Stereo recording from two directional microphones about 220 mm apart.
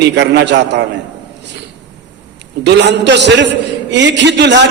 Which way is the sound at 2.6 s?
50° right (ahead or behind).